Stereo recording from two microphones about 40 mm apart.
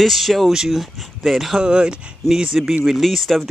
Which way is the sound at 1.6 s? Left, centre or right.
Right.